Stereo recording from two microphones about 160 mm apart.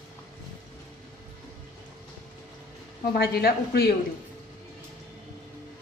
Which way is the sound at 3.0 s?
75° left (ahead or behind).